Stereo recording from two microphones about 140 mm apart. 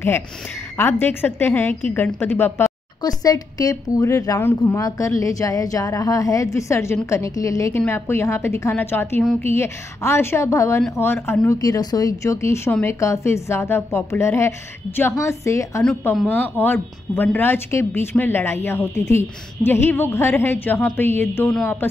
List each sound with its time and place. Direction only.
0.7 s a woman's voice: 15° left (ahead or behind)
3.0 s a woman's voice: 25° left (ahead or behind)